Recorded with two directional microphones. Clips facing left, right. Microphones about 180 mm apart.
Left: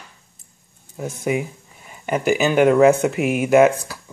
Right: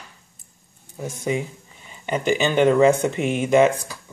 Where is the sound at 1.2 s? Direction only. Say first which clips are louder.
Left 2 dB; 10° left (ahead or behind).